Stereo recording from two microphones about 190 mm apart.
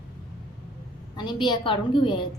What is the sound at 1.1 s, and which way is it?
A woman's voice, 25° left (ahead or behind).